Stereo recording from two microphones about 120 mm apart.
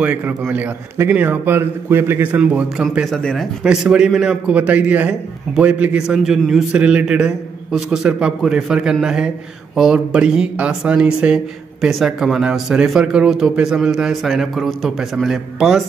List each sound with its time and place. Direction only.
0.0 s a man's voice: 15° right (ahead or behind)
3.2 s speech: 5° left (ahead or behind)
3.6 s a man's voice: 5° right (ahead or behind)